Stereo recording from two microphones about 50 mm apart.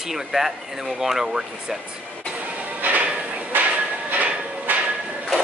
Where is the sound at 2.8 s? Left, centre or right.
Right.